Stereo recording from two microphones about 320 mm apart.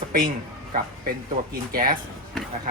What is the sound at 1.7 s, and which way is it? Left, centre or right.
Speech, right.